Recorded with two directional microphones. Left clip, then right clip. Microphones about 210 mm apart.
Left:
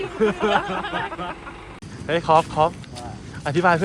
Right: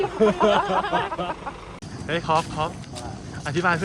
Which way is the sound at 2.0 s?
5° right (ahead or behind).